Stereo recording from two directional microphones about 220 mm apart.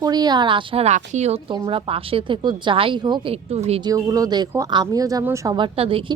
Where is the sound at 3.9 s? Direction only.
15° right (ahead or behind).